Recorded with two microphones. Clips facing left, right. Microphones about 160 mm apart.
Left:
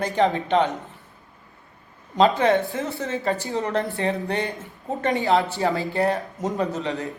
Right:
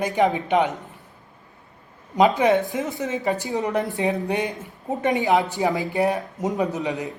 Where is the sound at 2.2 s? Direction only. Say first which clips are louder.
Right 1 dB; 10° right (ahead or behind).